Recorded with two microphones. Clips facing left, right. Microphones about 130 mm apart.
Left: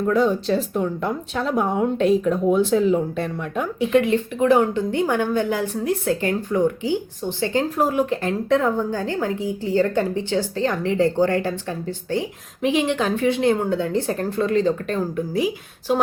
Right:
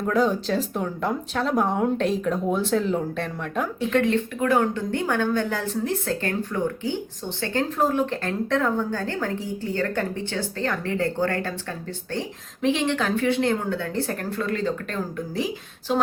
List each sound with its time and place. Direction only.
0.0 s a woman's voice: centre (ahead or behind); by 11.5 s 20° left (ahead or behind)
12.6 s a woman's voice: 15° left (ahead or behind)